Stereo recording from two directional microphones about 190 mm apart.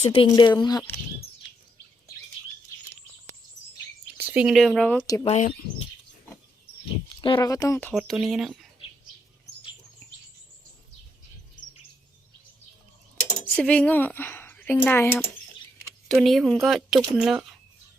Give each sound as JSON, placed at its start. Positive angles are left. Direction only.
{"t": 0.0, "sound": "speech", "side_deg": 25}
{"t": 4.2, "sound": "speech", "side_deg": -10}
{"t": 5.2, "sound": "speech", "side_deg": 35}
{"t": 7.1, "sound": "a sound", "side_deg": 25}
{"t": 7.3, "sound": "speech", "side_deg": 15}
{"t": 7.9, "sound": "speech", "side_deg": 0}
{"t": 13.6, "sound": "speech", "side_deg": 5}
{"t": 16.0, "sound": "speech", "side_deg": 0}